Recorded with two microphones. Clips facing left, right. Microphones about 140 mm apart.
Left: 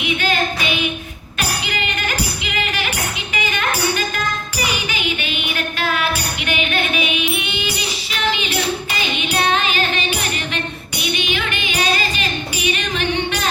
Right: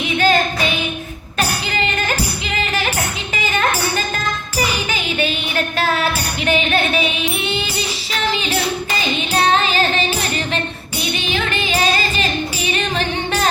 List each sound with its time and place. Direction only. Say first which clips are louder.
0.0 s singing: right 4 dB; 35° right (ahead or behind)
1.4 s music: right 3 dB; 35° right (ahead or behind)